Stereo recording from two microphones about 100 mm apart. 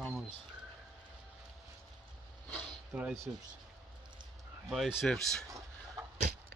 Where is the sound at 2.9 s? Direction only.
20° right (ahead or behind).